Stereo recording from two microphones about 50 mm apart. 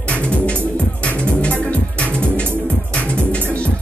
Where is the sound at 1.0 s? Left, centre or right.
Left.